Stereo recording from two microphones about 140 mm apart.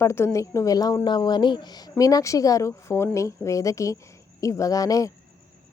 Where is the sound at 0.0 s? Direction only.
20° left (ahead or behind).